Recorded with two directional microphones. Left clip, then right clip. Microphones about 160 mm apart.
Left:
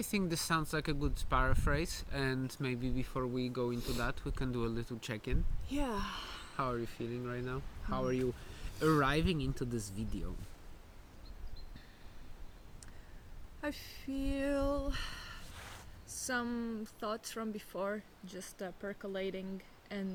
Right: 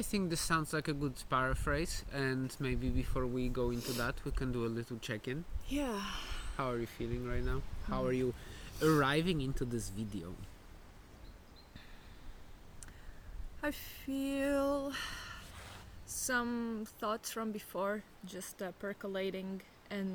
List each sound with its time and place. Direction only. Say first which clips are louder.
0.0 s speech: even; 15° left (ahead or behind)
3.8 s speech: right 1 dB; 10° right (ahead or behind)
4.0 s speech: right 1 dB; 15° left (ahead or behind)
5.6 s speech: even; 10° right (ahead or behind)
6.6 s speech: even; 5° left (ahead or behind)
13.6 s a sound: right 2 dB; 20° right (ahead or behind)
16.0 s speech: right 2 dB; 20° right (ahead or behind)